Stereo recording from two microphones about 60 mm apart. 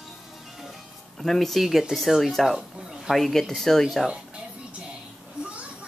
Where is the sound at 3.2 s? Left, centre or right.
Centre.